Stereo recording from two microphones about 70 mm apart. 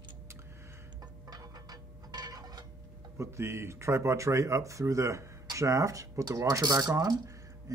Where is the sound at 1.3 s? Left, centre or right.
Right.